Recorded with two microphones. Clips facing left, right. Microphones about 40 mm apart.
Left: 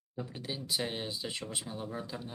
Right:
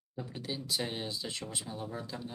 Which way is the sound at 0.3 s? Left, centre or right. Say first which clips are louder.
Even; centre.